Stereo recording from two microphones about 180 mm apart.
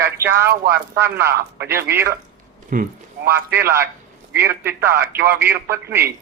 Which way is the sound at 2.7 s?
50° right (ahead or behind).